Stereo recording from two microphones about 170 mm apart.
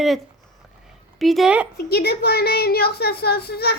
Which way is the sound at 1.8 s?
65° left (ahead or behind).